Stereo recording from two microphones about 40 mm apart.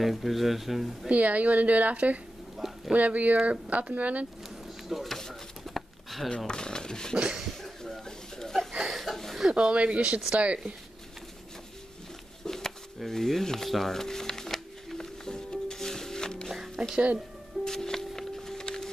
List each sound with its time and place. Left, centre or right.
0.0 s speech: centre
1.1 s a woman's voice: right
2.5 s a sound: centre
2.9 s a woman's voice: right
5.0 s a sound: centre
6.3 s speech: left
8.0 s a sound: centre
8.5 s chuckle: centre
9.5 s a woman's voice: right
12.4 s speech: centre
13.9 s music: centre
16.4 s music: centre
17.6 s music: centre